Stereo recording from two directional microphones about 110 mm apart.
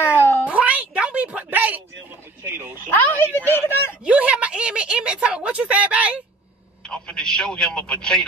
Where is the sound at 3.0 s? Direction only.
20° left (ahead or behind).